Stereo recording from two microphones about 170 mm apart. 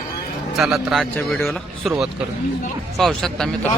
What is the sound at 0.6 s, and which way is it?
A man's voice, centre (ahead or behind).